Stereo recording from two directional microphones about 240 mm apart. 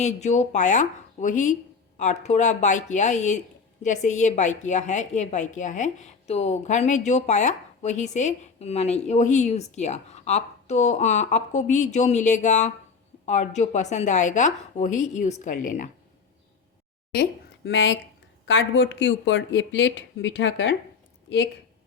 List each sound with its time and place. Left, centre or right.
0.0 s a woman's voice: left
17.2 s a woman's voice: left